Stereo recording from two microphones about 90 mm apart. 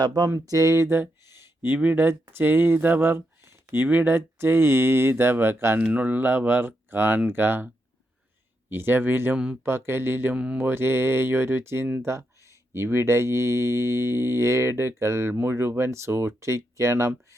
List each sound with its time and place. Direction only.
0.0 s a sound: 50° right (ahead or behind)
0.3 s speech: 40° right (ahead or behind)
5.8 s speech: 15° right (ahead or behind)
8.7 s speech: 25° right (ahead or behind)
10.3 s mantra: 15° right (ahead or behind)
10.6 s speech: 25° right (ahead or behind)